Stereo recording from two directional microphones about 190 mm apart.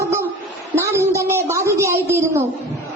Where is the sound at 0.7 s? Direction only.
15° right (ahead or behind).